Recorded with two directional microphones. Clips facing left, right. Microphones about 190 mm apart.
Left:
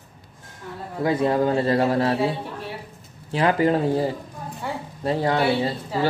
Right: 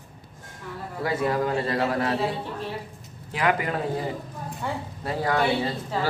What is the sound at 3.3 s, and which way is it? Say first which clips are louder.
Speech: left 6 dB; 30° left (ahead or behind).